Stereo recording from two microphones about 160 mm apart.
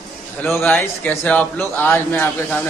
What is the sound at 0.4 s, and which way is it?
Speech, 10° left (ahead or behind).